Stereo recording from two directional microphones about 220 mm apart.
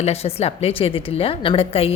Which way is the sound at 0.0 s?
30° left (ahead or behind).